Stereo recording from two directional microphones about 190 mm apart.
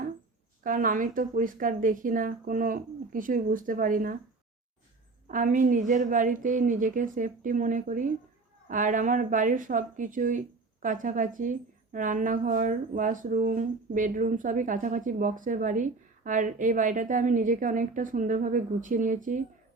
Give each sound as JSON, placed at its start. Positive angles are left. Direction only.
{"t": 0.6, "sound": "a woman's voice", "side_deg": -45}
{"t": 5.3, "sound": "a woman's voice", "side_deg": -45}